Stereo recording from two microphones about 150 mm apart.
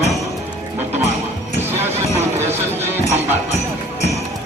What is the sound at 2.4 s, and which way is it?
Speech, 15° right (ahead or behind).